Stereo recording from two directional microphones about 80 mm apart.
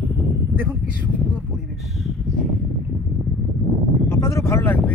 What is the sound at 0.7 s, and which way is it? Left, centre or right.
Speech, centre.